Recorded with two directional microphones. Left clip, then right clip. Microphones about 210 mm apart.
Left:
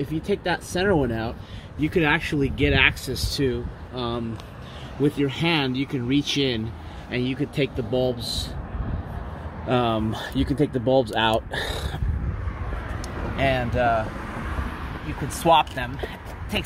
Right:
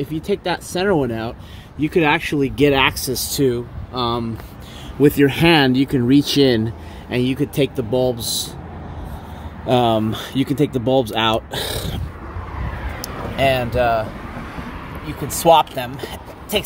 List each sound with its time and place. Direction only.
0.0 s speech: 30° right (ahead or behind)
6.0 s speech: 90° right
7.1 s speech: 35° right (ahead or behind)
9.7 s speech: 30° right (ahead or behind)
13.0 s speech: 20° right (ahead or behind)
15.2 s speech: 25° right (ahead or behind)